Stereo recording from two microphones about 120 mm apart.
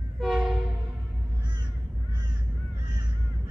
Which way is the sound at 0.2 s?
5° right (ahead or behind).